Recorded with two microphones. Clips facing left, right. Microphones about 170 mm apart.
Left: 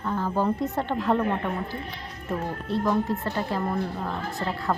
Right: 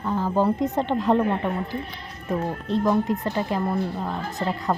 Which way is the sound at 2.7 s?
15° right (ahead or behind).